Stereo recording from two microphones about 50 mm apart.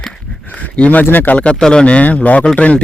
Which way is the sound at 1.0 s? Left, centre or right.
Left.